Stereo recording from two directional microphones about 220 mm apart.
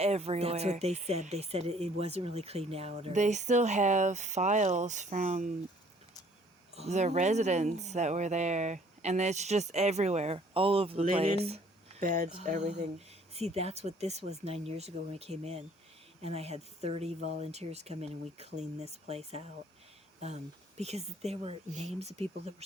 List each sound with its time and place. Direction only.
0.0 s speech: 30° right (ahead or behind)
6.7 s speech: 30° right (ahead or behind)